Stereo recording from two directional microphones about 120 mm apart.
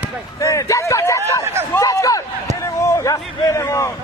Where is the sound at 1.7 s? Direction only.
25° left (ahead or behind).